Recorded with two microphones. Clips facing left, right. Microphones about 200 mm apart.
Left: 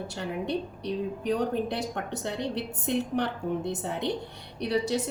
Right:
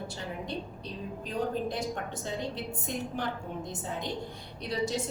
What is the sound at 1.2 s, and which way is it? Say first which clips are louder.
A woman's voice: left 3 dB; 70° left (ahead or behind).